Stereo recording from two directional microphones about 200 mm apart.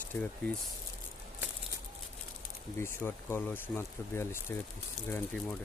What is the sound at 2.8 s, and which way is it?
Speech, 10° left (ahead or behind).